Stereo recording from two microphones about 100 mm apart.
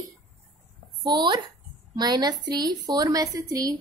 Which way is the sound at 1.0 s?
50° right (ahead or behind).